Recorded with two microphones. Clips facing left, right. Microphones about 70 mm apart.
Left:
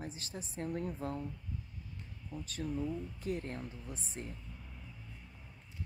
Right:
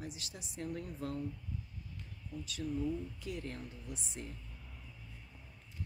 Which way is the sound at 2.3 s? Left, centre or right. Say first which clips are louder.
Even; left.